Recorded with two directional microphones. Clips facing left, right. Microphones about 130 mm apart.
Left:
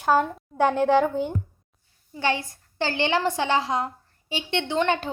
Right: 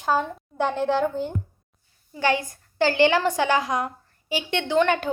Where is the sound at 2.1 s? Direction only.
25° left (ahead or behind).